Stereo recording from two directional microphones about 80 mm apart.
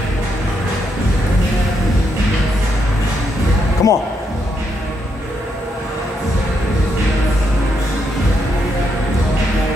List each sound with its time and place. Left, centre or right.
3.8 s speech: left